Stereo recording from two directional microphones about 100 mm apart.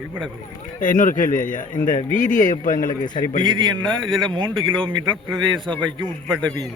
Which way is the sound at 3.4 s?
50° right (ahead or behind).